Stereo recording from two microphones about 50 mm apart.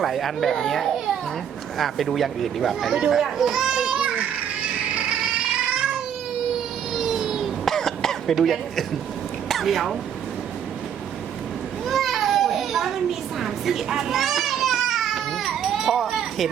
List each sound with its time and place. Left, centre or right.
0.0 s speech: centre
2.9 s a child's voice: centre
4.9 s a sound: right
5.5 s cat: centre
7.0 s a sound: centre
7.6 s cough: centre
8.4 s speech: centre
11.9 s children playing: centre